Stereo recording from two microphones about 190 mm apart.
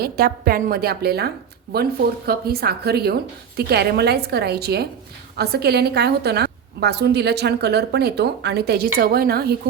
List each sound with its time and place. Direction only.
0.0 s a woman's voice: 55° right (ahead or behind)